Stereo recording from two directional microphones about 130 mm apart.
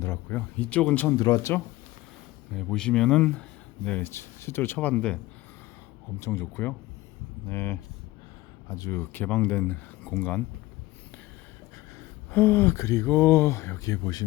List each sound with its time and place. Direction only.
0.0 s speech: 15° left (ahead or behind)
1.1 s speech: 30° left (ahead or behind)
2.6 s speech: 5° left (ahead or behind)
6.1 s speech: 20° left (ahead or behind)
11.9 s speech: 20° left (ahead or behind)